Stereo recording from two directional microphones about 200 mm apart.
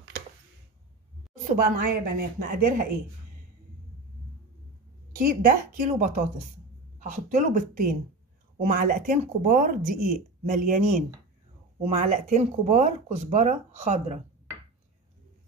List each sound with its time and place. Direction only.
1.5 s speech: 50° right (ahead or behind)
5.1 s speech: 45° right (ahead or behind)